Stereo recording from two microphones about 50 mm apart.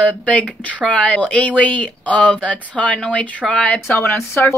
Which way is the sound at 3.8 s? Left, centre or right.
Left.